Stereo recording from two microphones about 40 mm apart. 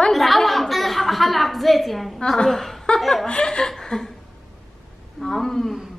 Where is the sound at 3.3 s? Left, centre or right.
Left.